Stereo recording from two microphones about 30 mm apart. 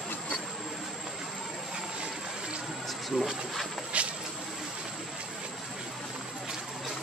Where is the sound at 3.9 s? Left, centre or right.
Right.